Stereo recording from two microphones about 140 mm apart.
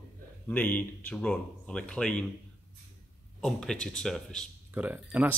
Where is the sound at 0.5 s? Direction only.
10° left (ahead or behind).